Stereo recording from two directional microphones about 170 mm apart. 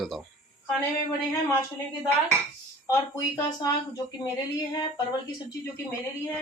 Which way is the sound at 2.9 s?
20° left (ahead or behind).